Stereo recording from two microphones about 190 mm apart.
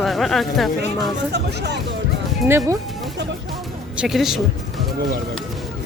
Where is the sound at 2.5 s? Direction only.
15° right (ahead or behind).